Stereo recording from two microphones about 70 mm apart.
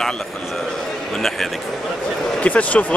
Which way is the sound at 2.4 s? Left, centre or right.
Left.